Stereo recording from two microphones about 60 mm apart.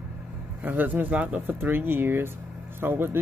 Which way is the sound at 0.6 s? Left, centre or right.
Right.